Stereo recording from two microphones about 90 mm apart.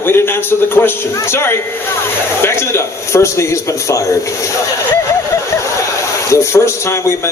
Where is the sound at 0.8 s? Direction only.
25° left (ahead or behind).